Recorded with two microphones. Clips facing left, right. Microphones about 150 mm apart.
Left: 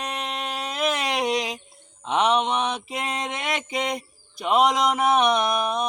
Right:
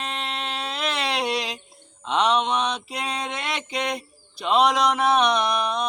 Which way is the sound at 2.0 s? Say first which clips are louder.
Even; 15° left (ahead or behind).